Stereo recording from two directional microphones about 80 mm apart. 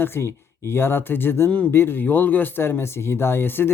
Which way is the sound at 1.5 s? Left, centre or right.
Centre.